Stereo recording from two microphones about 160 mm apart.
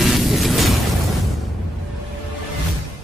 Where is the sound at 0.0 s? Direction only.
Centre (ahead or behind).